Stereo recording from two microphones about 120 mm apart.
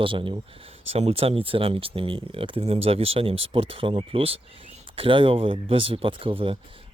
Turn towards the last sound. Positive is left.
turn(degrees=-50)  # may be behind; listen again after turning